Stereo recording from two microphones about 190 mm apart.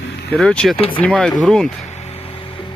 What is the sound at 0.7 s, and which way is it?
Speech, 30° left (ahead or behind).